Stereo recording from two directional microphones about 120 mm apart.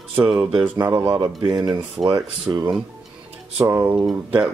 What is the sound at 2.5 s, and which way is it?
Speech, 35° right (ahead or behind).